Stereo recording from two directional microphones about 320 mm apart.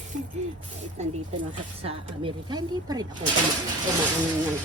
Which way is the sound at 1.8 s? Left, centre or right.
Centre.